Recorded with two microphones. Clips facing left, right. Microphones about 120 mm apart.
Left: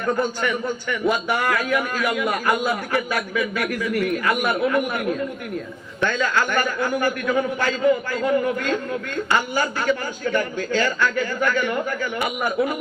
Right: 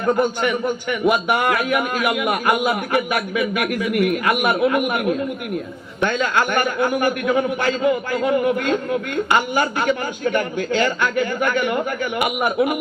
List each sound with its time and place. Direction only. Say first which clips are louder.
0.2 s a man's voice: right 4 dB; 20° right (ahead or behind)
3.9 s a man's voice: right 4 dB; 30° left (ahead or behind)
4.3 s a man's voice: right 3 dB; 20° right (ahead or behind)
6.5 s a man's voice: right 3 dB; 20° right (ahead or behind)